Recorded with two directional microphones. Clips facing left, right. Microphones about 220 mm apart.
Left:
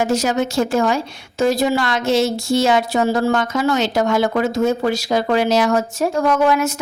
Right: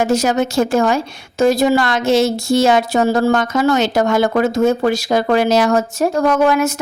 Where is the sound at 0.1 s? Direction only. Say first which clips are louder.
Right 3 dB; 50° right (ahead or behind).